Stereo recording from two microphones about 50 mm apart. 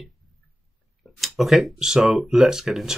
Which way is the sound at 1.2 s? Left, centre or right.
Centre.